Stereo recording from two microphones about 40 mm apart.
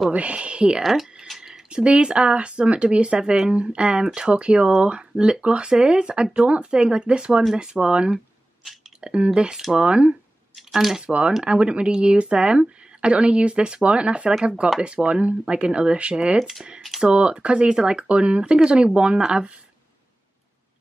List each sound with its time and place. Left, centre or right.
0.1 s speech: right
1.2 s a sound: centre
1.5 s speech: right
10.5 s a sound: centre
11.0 s speech: right
16.3 s speech: centre
17.0 s speech: right